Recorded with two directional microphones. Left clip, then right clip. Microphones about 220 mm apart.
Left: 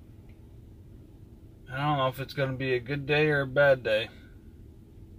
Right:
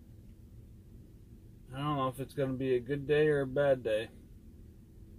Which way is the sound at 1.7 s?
40° left (ahead or behind).